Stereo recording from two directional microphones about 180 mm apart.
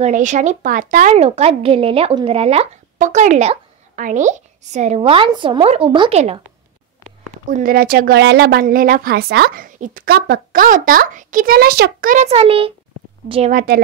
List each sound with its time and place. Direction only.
0.0 s a woman's voice: 45° right (ahead or behind)
7.4 s a woman's voice: 50° right (ahead or behind); by 12.7 s 30° right (ahead or behind)
13.5 s a woman's voice: 50° right (ahead or behind)